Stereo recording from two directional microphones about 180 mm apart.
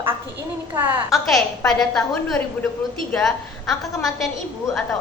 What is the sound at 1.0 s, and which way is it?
A woman's voice, centre (ahead or behind).